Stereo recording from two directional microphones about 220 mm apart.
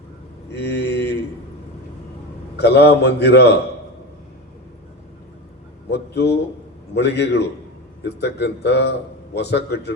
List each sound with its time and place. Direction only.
0.5 s a sound: 50° left (ahead or behind)
2.6 s a man's voice: 50° left (ahead or behind)
5.9 s a man's voice: 50° left (ahead or behind)